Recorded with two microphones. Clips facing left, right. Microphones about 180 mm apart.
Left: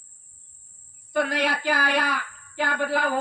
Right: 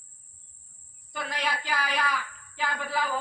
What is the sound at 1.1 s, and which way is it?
Speech, 55° left (ahead or behind).